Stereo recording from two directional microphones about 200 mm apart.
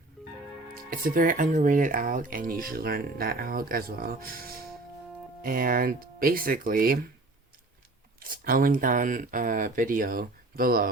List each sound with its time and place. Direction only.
0.7 s speech: 45° right (ahead or behind)
8.2 s speech: 45° right (ahead or behind)